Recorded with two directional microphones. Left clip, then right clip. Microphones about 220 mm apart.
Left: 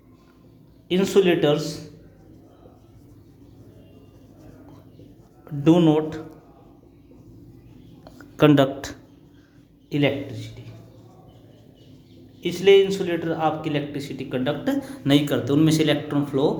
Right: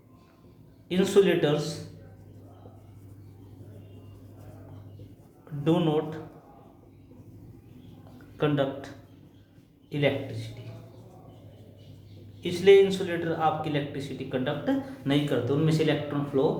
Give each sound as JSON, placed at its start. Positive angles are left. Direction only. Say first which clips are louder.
{"t": 0.9, "sound": "speech", "louder": "left 3 dB", "side_deg": 30}
{"t": 5.6, "sound": "speech", "louder": "left 8 dB", "side_deg": 40}
{"t": 8.4, "sound": "speech", "louder": "left 10 dB", "side_deg": 50}
{"t": 9.9, "sound": "speech", "louder": "left 4 dB", "side_deg": 35}
{"t": 12.4, "sound": "speech", "louder": "left 3 dB", "side_deg": 30}